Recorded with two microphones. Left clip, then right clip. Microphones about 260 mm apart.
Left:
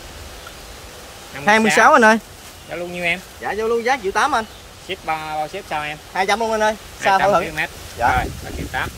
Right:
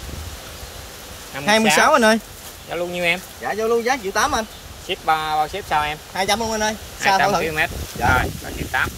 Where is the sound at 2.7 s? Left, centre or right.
Centre.